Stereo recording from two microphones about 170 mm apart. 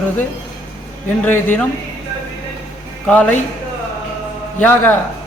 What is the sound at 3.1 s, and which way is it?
Speech, 10° left (ahead or behind).